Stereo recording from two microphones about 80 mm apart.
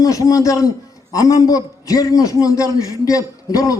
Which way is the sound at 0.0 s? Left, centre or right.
Left.